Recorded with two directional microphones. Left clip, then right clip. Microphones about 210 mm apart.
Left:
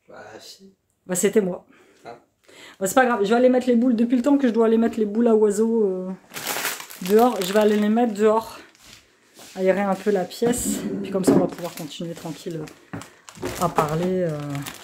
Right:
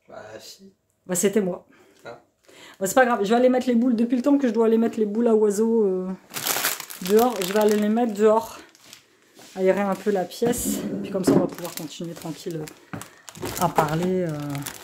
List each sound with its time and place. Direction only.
1.0 s speech: 5° right (ahead or behind)
5.9 s speech: 15° right (ahead or behind)
6.3 s crumpling: 45° right (ahead or behind)
7.1 s speech: centre (ahead or behind)
14.1 s speech: centre (ahead or behind)